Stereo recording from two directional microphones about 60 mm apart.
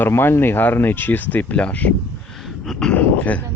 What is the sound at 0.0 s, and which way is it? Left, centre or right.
Speech, left.